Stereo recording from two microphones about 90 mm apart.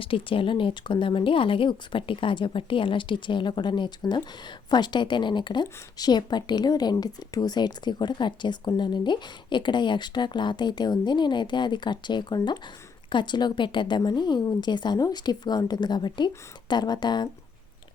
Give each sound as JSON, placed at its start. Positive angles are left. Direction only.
{"t": 0.0, "sound": "a woman's voice", "side_deg": 85}